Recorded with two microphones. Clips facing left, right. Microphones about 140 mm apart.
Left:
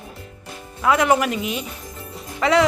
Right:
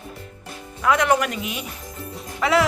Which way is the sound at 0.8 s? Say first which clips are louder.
Left 2 dB; 5° left (ahead or behind).